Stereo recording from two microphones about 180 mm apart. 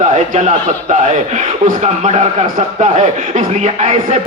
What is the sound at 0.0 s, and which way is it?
A man's voice, 40° right (ahead or behind).